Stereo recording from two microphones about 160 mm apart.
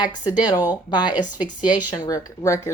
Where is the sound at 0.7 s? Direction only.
25° left (ahead or behind).